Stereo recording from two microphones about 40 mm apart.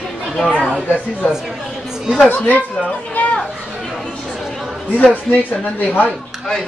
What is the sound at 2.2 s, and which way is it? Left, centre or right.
Speech, left.